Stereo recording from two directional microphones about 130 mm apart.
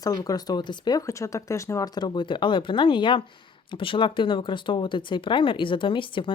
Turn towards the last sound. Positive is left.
turn(degrees=40)  # may be behind; listen again after turning